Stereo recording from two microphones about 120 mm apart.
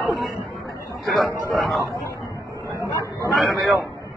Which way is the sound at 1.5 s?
Centre (ahead or behind).